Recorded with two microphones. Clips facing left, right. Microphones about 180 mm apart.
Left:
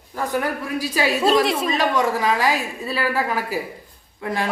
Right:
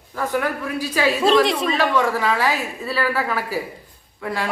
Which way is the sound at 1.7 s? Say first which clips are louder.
Right 1 dB; 15° left (ahead or behind).